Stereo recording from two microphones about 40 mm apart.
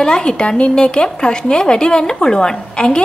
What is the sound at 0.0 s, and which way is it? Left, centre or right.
Speech, left.